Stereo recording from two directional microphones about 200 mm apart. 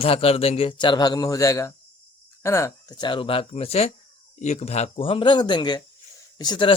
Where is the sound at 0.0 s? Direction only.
30° left (ahead or behind).